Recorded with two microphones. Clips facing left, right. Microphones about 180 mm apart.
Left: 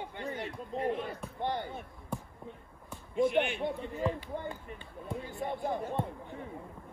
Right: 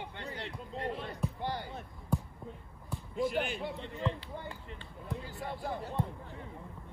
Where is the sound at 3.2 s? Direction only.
Centre (ahead or behind).